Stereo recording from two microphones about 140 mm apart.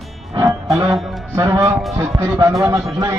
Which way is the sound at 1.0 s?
Centre (ahead or behind).